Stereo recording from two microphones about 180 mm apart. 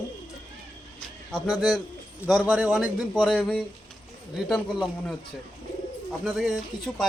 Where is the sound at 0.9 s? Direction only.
5° left (ahead or behind).